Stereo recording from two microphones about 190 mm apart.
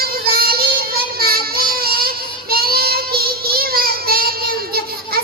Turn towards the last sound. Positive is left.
turn(degrees=-55)  # may be behind; listen again after turning